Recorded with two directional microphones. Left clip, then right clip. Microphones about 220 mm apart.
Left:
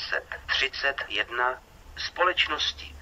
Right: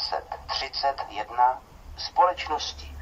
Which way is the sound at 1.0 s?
45° left (ahead or behind).